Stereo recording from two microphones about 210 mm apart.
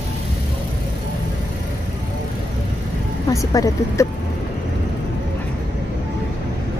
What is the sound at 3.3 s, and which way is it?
Speech, 15° left (ahead or behind).